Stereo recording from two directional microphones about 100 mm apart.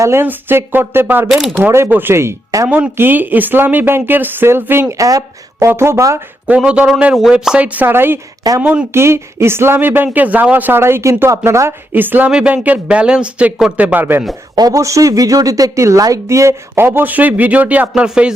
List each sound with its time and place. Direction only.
0.0 s speech: 25° right (ahead or behind)
1.3 s speech: 5° right (ahead or behind)
1.6 s speech: 20° right (ahead or behind)
2.6 s speech: 15° right (ahead or behind)
6.5 s speech: 10° right (ahead or behind)
8.9 s speech: 25° right (ahead or behind)
14.5 s speech: 35° right (ahead or behind); by 18.3 s 5° right (ahead or behind)